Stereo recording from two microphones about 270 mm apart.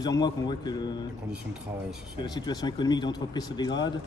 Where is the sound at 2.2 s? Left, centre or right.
Centre.